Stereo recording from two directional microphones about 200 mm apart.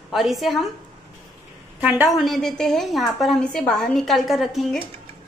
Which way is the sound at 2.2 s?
Centre (ahead or behind).